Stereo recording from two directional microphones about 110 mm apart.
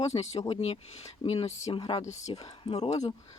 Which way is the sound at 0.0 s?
80° left.